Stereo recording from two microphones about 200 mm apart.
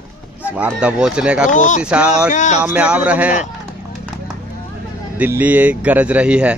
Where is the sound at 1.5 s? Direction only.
40° left (ahead or behind).